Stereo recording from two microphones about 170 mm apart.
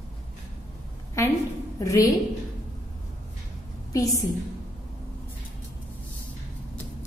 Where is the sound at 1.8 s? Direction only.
20° left (ahead or behind).